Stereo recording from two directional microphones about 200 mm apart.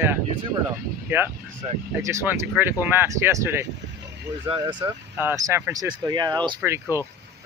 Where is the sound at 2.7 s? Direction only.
10° right (ahead or behind).